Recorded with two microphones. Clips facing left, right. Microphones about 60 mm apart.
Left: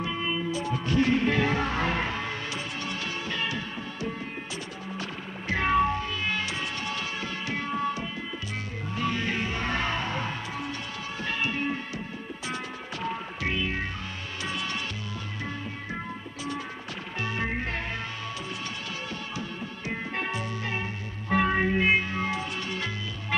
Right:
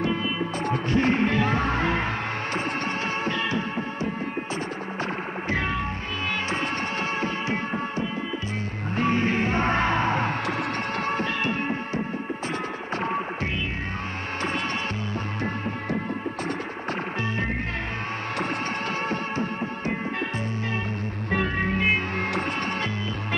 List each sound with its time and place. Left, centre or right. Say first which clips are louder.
0.9 s music: right 1 dB; right
3.3 s music: right 5 dB; right
7.2 s music: right 5 dB; right
13.0 s music: right 4 dB; right
19.0 s music: right 8 dB; right